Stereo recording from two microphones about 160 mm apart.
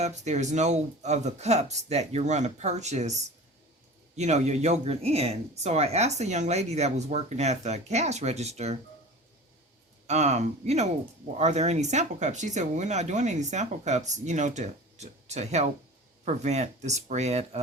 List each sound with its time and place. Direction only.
0.0 s speech: 45° right (ahead or behind)
4.2 s speech: 45° right (ahead or behind)
10.1 s speech: 45° right (ahead or behind)